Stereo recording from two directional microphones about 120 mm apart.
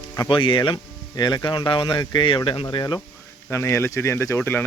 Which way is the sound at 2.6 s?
35° left (ahead or behind).